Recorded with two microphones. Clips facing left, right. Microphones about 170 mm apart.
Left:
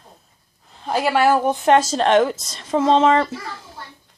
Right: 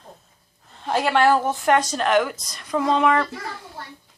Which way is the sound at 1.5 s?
25° left (ahead or behind).